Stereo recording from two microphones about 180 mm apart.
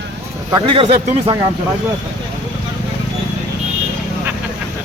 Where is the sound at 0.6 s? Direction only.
30° right (ahead or behind).